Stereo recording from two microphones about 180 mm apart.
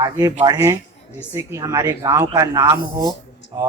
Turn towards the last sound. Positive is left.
turn(degrees=-20)  # may be behind; listen again after turning